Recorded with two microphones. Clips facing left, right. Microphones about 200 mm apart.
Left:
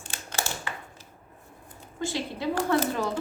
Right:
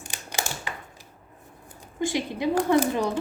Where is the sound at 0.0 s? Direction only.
15° right (ahead or behind).